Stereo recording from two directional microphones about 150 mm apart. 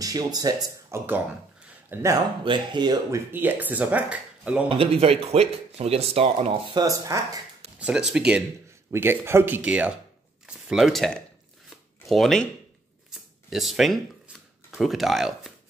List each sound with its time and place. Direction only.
0.0 s speech: 25° right (ahead or behind)
1.9 s speech: 10° right (ahead or behind)
2.4 s speech: 30° right (ahead or behind)
3.3 s speech: 15° right (ahead or behind)
4.6 s speech: 40° right (ahead or behind); by 7.2 s 20° right (ahead or behind)
7.8 s speech: 5° right (ahead or behind)
8.9 s speech: 15° right (ahead or behind); by 11.1 s centre (ahead or behind)
11.7 s shuffling cards: centre (ahead or behind)
13.1 s a sound: centre (ahead or behind)
14.7 s speech: centre (ahead or behind)